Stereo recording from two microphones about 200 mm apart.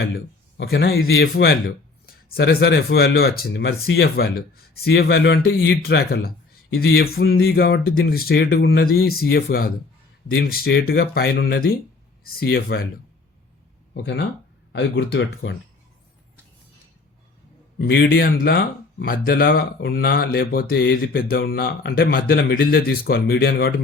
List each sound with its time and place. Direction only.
0.0 s a man's voice: 55° left (ahead or behind)
13.9 s speech: 60° left (ahead or behind)
17.7 s speech: 55° left (ahead or behind)